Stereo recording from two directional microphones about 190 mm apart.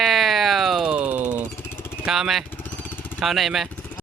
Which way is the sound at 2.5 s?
10° left (ahead or behind).